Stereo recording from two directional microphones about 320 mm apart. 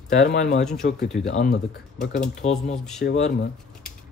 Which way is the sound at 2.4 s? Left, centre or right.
Left.